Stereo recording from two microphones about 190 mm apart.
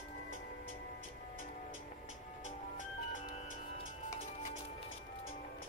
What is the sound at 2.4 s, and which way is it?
Music, 40° left (ahead or behind).